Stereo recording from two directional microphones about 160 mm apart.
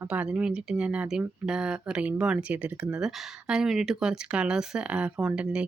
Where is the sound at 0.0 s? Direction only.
10° right (ahead or behind).